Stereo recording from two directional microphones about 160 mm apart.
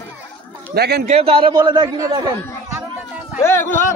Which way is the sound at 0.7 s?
90° right.